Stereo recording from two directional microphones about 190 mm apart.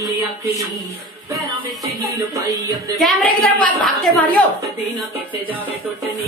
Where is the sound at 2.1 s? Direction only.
20° right (ahead or behind).